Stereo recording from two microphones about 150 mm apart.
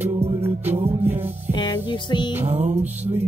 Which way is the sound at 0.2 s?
40° right (ahead or behind).